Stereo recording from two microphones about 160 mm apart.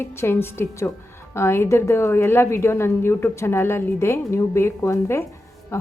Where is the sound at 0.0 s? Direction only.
15° left (ahead or behind).